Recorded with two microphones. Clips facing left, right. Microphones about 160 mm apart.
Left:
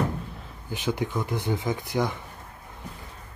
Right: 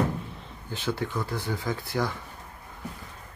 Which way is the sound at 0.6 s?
15° left (ahead or behind).